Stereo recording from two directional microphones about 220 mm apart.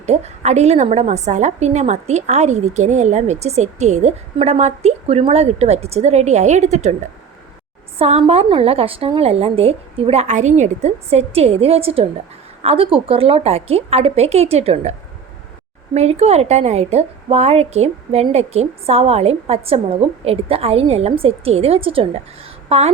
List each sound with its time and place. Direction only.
0.0 s a woman's voice: 30° right (ahead or behind)
7.9 s a woman's voice: 30° right (ahead or behind)
16.0 s a woman's voice: 30° right (ahead or behind)